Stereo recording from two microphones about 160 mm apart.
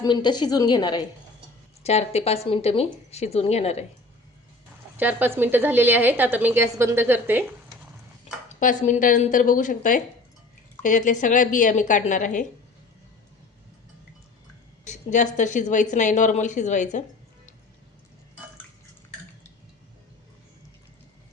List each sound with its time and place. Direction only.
0.0 s a woman's voice: 25° left (ahead or behind)
1.8 s a woman's voice: 40° left (ahead or behind)
4.9 s a woman's voice: 10° right (ahead or behind)
8.4 s speech: 50° left (ahead or behind)
14.8 s speech: 50° left (ahead or behind)